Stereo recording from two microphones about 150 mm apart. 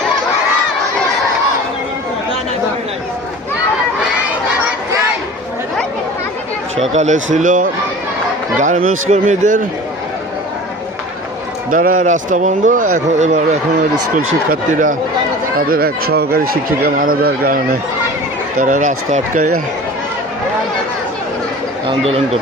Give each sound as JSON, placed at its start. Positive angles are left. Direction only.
{"t": 6.9, "sound": "a man's voice", "side_deg": -50}
{"t": 11.7, "sound": "a man's voice", "side_deg": -65}
{"t": 14.5, "sound": "a man's voice", "side_deg": -65}
{"t": 15.5, "sound": "speech", "side_deg": -85}
{"t": 18.5, "sound": "a man's voice", "side_deg": -60}
{"t": 21.8, "sound": "speech", "side_deg": -40}